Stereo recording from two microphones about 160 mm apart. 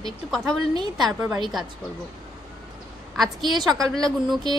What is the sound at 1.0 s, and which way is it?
Speech, 10° right (ahead or behind).